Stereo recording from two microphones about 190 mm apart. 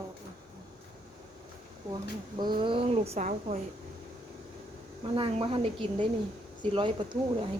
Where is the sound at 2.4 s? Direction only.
25° right (ahead or behind).